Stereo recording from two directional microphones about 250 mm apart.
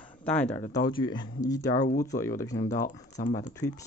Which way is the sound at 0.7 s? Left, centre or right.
Centre.